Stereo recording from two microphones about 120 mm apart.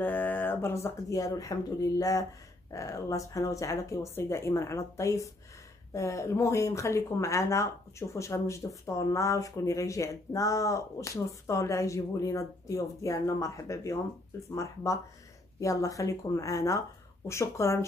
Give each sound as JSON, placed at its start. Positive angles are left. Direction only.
{"t": 0.0, "sound": "speech", "side_deg": 15}